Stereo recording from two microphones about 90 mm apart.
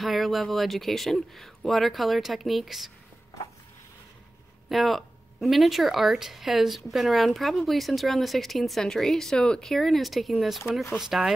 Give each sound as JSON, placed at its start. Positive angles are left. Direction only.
{"t": 0.0, "sound": "speech", "side_deg": 0}
{"t": 4.6, "sound": "speech", "side_deg": 0}